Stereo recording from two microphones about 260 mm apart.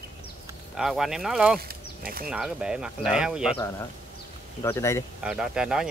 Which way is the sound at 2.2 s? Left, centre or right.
Centre.